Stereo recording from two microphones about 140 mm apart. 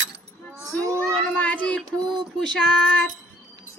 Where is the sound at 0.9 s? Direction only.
10° left (ahead or behind).